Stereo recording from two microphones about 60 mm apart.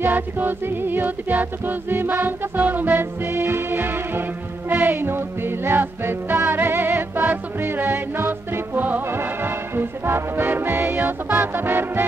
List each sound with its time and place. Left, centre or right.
0.0 s music: right